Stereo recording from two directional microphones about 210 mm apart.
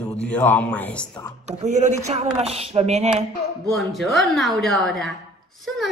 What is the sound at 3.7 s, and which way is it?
A woman's voice, centre (ahead or behind).